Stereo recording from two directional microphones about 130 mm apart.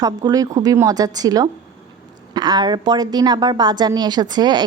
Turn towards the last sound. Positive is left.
turn(degrees=-30)  # may be behind; listen again after turning